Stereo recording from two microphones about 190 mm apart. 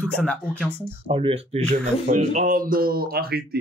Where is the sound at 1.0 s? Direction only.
30° right (ahead or behind).